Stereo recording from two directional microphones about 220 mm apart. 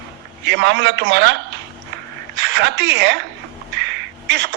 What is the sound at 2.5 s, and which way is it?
Speech, 50° right (ahead or behind).